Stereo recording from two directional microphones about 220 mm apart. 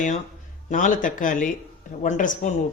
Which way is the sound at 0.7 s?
35° left (ahead or behind).